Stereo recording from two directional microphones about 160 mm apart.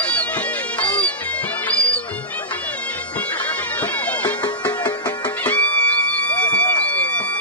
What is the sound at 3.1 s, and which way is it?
Bagpipes, 10° left (ahead or behind).